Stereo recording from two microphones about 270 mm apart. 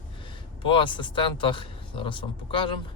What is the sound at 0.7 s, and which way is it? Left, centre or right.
Speech, centre.